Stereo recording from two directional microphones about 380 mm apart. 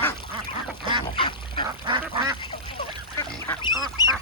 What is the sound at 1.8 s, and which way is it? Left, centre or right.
Duck, centre.